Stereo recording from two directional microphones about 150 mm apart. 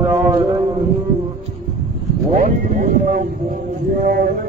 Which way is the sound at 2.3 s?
60° right (ahead or behind).